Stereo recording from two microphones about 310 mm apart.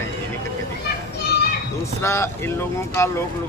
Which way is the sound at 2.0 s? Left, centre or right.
Centre.